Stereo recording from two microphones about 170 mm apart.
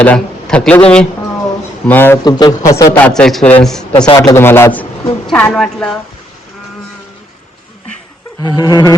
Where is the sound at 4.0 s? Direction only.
25° left (ahead or behind).